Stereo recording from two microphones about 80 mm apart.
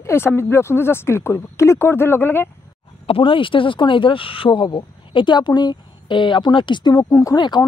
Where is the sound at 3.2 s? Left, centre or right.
Left.